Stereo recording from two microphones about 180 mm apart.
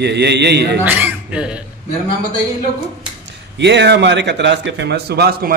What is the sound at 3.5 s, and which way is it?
A man's voice, 75° right (ahead or behind).